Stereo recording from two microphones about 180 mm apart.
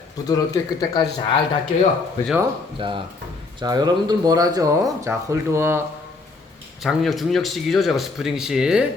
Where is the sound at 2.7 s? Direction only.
30° right (ahead or behind).